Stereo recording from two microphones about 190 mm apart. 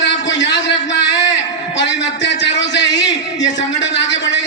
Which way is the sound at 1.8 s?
65° left (ahead or behind).